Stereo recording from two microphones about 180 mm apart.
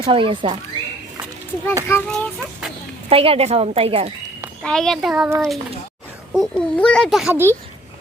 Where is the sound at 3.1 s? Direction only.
30° right (ahead or behind).